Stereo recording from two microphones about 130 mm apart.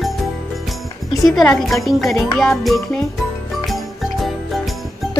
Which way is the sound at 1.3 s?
Centre (ahead or behind).